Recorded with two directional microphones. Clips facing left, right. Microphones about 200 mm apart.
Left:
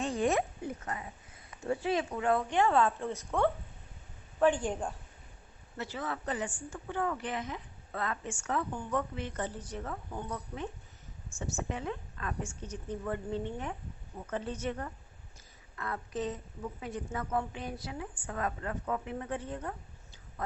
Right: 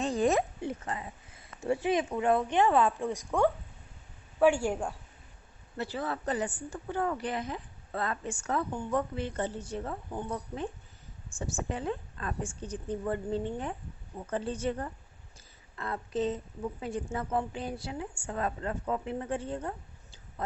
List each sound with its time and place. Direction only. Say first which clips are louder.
0.0 s a sound: right 3 dB; 35° right (ahead or behind)
0.9 s a woman's voice: right 2 dB; 30° right (ahead or behind); by 4.8 s 10° right (ahead or behind)
5.7 s a woman's voice: right 3 dB; 35° right (ahead or behind)